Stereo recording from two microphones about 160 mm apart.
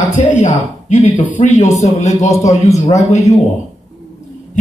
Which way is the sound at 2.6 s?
20° left (ahead or behind).